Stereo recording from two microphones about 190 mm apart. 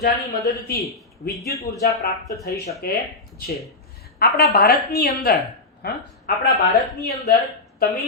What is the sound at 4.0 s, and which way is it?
A woman's voice, 55° left (ahead or behind).